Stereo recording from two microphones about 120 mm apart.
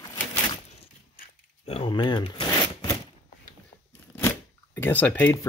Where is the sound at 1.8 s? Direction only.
40° left (ahead or behind).